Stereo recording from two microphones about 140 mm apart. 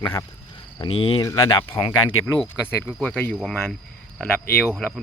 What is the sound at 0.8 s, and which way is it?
Speech, 35° left (ahead or behind).